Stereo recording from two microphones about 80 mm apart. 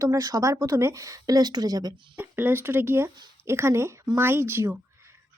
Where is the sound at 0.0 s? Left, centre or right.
Right.